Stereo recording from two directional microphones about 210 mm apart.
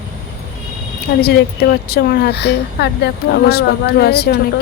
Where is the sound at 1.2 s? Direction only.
50° left (ahead or behind).